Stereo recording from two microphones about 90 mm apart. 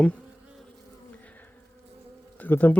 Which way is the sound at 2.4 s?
20° left (ahead or behind).